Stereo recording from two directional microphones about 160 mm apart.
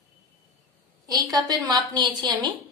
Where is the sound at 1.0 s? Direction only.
25° right (ahead or behind).